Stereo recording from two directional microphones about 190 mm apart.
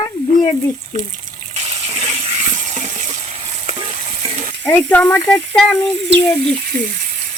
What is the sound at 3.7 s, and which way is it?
Stir, 30° right (ahead or behind).